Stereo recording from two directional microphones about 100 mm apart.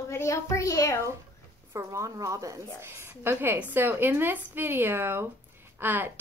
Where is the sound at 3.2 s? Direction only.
20° right (ahead or behind).